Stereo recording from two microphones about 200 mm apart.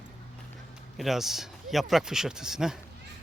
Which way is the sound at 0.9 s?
Centre (ahead or behind).